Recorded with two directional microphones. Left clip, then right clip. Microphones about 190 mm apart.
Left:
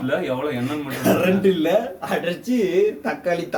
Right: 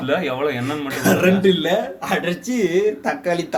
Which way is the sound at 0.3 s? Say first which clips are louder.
Right 3 dB; 30° right (ahead or behind).